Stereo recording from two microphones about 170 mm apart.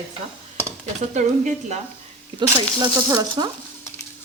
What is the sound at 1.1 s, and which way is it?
Speech, 45° right (ahead or behind).